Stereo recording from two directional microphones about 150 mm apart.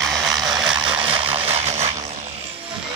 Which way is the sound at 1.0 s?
40° right (ahead or behind).